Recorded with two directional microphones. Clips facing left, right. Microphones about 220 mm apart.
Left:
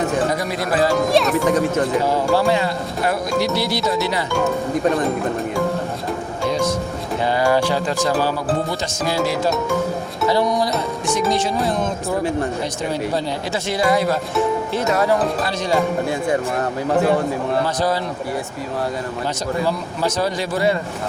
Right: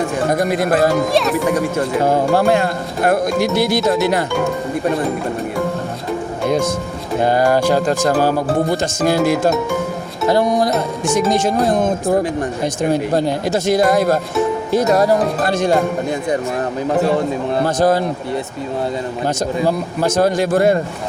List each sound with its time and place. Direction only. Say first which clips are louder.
0.3 s speech: right 5 dB; 50° right (ahead or behind)
0.9 s a child's voice: right 1 dB; centre (ahead or behind)
1.5 s speech: even; 10° right (ahead or behind)
2.0 s speech: right 3 dB; 50° right (ahead or behind)
7.2 s speech: right 3 dB; 50° right (ahead or behind)
15.4 s speech: right 5 dB; 50° right (ahead or behind)
17.7 s speech: right 6 dB; 50° right (ahead or behind)
19.6 s speech: right 4 dB; 50° right (ahead or behind)